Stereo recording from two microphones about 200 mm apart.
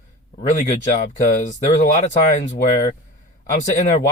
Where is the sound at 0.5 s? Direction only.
40° left (ahead or behind).